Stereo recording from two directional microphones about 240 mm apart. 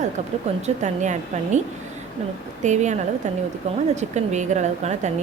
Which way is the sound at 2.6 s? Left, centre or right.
Right.